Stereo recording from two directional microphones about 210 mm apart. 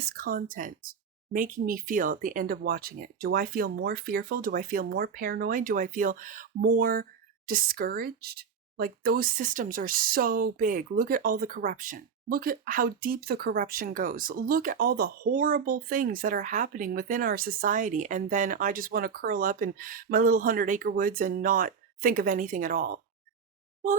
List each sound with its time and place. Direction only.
0.0 s speech: 45° right (ahead or behind)